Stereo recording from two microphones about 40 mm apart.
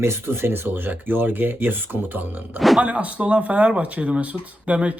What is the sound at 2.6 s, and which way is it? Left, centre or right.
Speech, centre.